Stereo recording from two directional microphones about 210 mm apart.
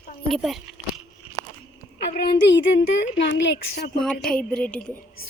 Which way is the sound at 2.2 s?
55° left (ahead or behind).